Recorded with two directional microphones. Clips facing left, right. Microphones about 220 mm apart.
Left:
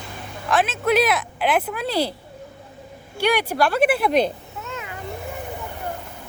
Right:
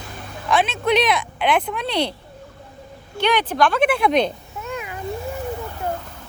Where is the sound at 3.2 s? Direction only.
10° left (ahead or behind).